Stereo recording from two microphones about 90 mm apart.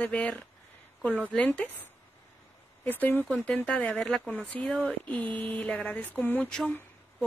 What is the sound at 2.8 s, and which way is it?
Speech, 20° left (ahead or behind).